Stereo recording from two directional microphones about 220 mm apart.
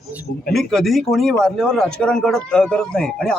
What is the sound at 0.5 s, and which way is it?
A man's voice, centre (ahead or behind).